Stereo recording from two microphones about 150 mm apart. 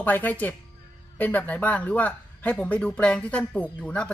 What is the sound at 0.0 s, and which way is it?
A man's voice, 10° left (ahead or behind).